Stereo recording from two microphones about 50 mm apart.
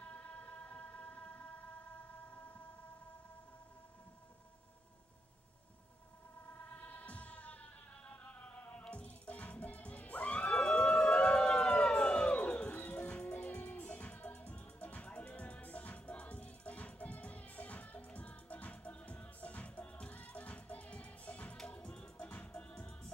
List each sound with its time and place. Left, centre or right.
0.0 s music: left
6.7 s music: left